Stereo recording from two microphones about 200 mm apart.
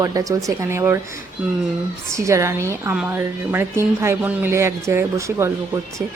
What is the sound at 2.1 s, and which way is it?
Speech, 15° right (ahead or behind).